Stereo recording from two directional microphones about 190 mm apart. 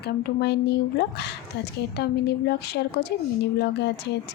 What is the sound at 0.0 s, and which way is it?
Speech, 60° left (ahead or behind).